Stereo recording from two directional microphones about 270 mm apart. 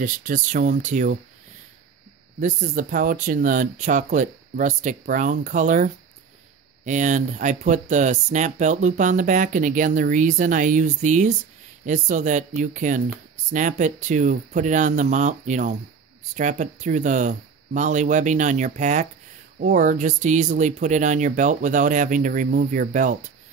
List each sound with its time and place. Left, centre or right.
0.0 s speech: right
2.4 s speech: right